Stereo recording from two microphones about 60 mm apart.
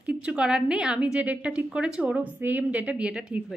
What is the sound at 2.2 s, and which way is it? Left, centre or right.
A woman's voice, right.